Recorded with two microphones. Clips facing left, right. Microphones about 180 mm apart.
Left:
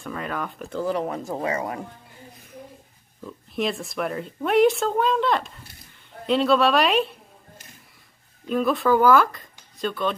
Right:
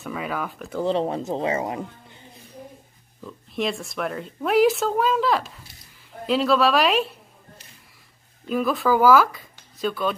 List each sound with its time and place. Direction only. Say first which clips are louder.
0.0 s speech: right 1 dB; 5° right (ahead or behind)
0.8 s speech: right 3 dB; 25° right (ahead or behind)
3.3 s speech: even; centre (ahead or behind)
8.5 s speech: left 1 dB; centre (ahead or behind)